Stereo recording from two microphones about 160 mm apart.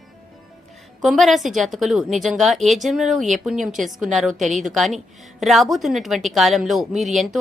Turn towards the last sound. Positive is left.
turn(degrees=0)  # may be behind; listen again after turning